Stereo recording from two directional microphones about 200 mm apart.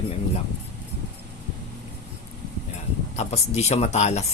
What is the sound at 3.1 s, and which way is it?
Speech, 35° left (ahead or behind).